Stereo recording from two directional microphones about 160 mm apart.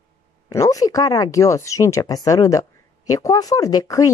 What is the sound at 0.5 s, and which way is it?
A woman's voice, 20° left (ahead or behind).